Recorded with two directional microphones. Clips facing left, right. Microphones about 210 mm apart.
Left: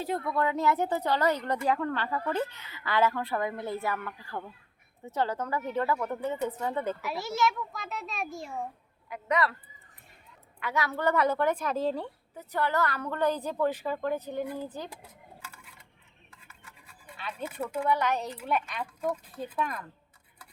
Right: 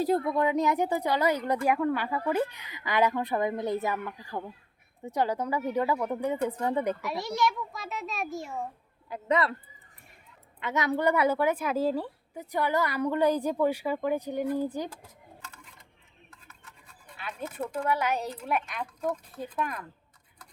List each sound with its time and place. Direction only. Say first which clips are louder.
0.3 s a woman's voice: right 2 dB; 15° right (ahead or behind)
7.0 s a child's voice: even; centre (ahead or behind)
9.0 s speech: right 2 dB; 30° right (ahead or behind)
10.6 s a woman's voice: right 3 dB; 20° right (ahead or behind)
15.4 s dishes: even; 10° left (ahead or behind)
16.3 s toothbrush: left 1 dB; 10° left (ahead or behind)
17.4 s speech: even; 10° left (ahead or behind)
17.8 s a woman's voice: left 1 dB; 5° right (ahead or behind)
18.8 s speech: even; 10° left (ahead or behind)
19.5 s a child's voice: even; 5° right (ahead or behind)